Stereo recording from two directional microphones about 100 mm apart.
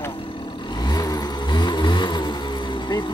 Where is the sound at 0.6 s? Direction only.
45° left (ahead or behind).